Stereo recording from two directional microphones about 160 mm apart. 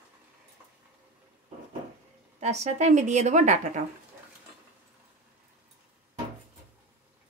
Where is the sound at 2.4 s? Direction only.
45° right (ahead or behind).